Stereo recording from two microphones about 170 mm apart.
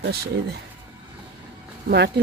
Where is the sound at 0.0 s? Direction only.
70° right (ahead or behind).